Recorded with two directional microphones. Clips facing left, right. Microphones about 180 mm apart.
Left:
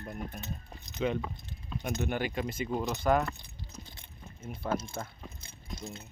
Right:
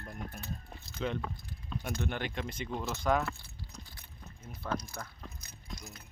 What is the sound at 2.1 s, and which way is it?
Speech, 5° left (ahead or behind).